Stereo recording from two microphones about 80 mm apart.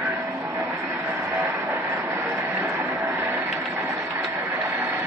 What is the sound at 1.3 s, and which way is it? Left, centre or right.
Vehicle, right.